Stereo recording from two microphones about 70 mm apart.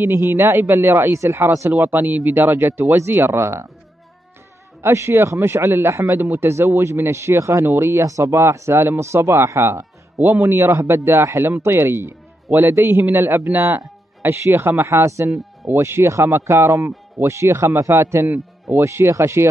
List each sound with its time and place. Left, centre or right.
0.0 s speech: right
1.7 s speech: right
3.3 s speech: right
4.8 s speech: right